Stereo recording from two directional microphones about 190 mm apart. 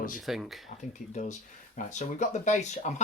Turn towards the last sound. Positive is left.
turn(degrees=40)  # may be behind; listen again after turning